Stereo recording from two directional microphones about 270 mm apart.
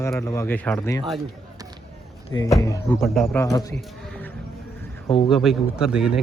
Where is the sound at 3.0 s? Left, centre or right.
Centre.